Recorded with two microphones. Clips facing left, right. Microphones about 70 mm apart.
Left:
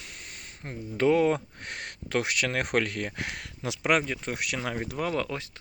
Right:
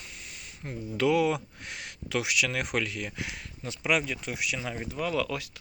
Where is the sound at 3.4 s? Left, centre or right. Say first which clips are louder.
Left 5 dB; left.